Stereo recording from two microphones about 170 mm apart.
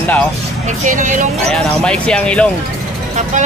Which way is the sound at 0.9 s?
50° right (ahead or behind).